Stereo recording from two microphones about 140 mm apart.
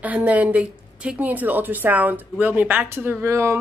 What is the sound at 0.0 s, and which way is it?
A woman's voice, 10° right (ahead or behind).